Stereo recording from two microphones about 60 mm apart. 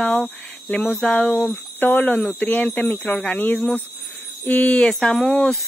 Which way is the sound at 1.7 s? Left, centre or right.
Left.